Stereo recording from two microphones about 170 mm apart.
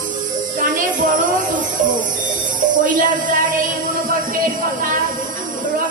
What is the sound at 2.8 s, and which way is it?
Speech, 55° right (ahead or behind).